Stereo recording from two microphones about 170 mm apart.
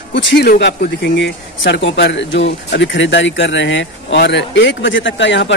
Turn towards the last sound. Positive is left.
turn(degrees=90)